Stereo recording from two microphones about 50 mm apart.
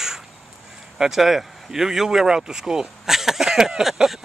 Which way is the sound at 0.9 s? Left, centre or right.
Centre.